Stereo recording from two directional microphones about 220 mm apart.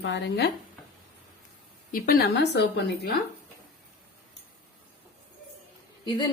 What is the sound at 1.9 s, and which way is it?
A woman's voice, 40° left (ahead or behind).